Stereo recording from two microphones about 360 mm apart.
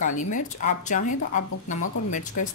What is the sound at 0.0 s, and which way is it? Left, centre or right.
Speech, left.